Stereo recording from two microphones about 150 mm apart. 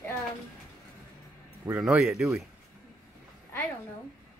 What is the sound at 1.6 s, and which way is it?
Speech, 10° right (ahead or behind).